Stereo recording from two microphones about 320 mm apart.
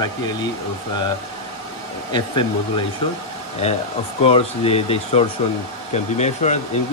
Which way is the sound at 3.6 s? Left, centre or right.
Centre.